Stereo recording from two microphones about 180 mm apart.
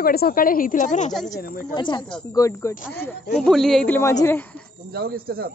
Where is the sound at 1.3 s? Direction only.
55° left (ahead or behind).